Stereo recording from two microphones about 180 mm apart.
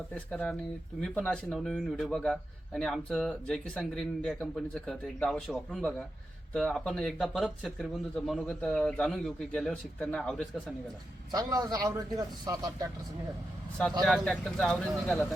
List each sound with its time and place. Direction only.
0.1 s speech: 5° left (ahead or behind)
11.3 s a man's voice: 20° right (ahead or behind)
14.0 s speech: 5° left (ahead or behind)